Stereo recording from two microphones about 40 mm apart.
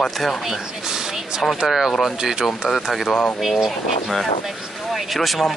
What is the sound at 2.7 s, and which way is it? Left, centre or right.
Speech, centre.